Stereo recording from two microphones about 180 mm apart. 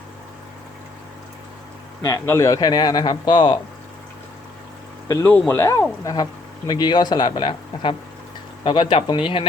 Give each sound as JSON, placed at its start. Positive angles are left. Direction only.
{"t": 2.0, "sound": "speech", "side_deg": 15}
{"t": 5.3, "sound": "speech", "side_deg": 10}
{"t": 6.7, "sound": "speech", "side_deg": 25}